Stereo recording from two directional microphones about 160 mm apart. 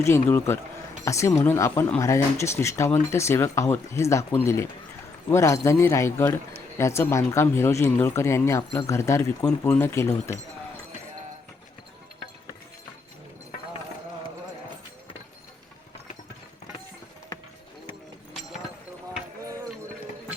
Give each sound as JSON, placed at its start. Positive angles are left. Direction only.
{"t": 0.0, "sound": "speech", "side_deg": 15}